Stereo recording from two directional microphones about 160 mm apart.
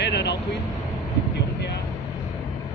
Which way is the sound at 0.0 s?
90° left.